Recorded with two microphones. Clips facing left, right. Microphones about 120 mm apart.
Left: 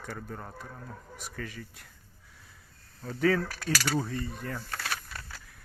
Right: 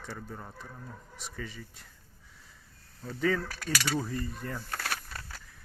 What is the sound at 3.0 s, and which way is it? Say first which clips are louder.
Speech: left 3 dB; 5° left (ahead or behind).